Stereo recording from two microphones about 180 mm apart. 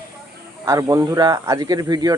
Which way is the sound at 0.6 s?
20° right (ahead or behind).